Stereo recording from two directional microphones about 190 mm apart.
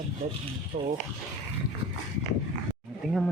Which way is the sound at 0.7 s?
40° right (ahead or behind).